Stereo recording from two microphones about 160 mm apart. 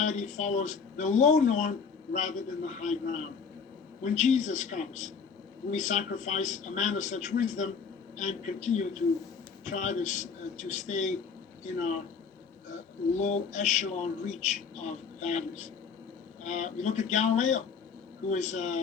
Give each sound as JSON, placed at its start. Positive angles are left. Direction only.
{"t": 0.0, "sound": "speech", "side_deg": 50}